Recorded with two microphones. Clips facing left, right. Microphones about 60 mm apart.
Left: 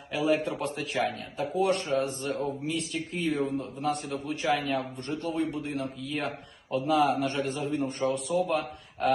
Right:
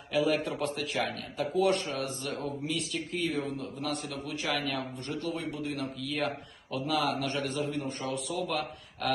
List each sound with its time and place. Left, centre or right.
0.1 s a man's voice: left